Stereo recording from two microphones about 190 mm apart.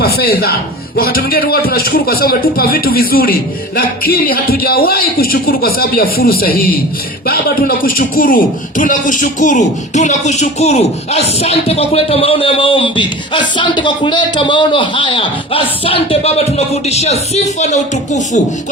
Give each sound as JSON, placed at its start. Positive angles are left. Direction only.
{"t": 0.0, "sound": "a man's voice", "side_deg": 55}